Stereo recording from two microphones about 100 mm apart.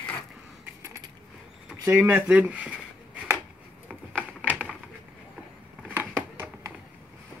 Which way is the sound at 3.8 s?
15° right (ahead or behind).